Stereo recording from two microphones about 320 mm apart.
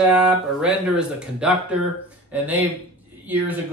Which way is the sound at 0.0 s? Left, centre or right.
Centre.